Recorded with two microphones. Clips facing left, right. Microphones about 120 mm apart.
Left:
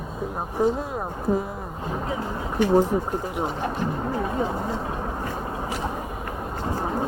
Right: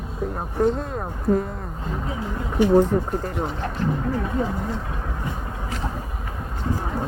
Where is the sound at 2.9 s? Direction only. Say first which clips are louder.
Right 2 dB; 5° left (ahead or behind).